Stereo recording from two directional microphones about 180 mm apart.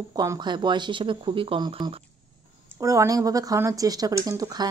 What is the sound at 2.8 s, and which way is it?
Speech, 20° right (ahead or behind).